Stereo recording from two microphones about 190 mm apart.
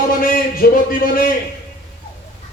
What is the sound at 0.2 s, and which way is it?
A man's voice, 50° left (ahead or behind).